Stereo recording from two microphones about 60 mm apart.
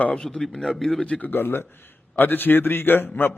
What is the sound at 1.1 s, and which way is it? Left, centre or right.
A man's voice, left.